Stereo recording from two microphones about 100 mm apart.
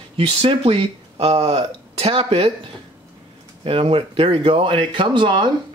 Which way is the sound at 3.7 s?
65° right (ahead or behind).